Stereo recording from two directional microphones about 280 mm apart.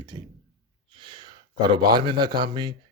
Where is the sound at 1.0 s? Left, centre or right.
Centre.